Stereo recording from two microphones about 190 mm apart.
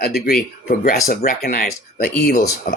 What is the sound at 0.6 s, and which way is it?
Speech, 45° left (ahead or behind).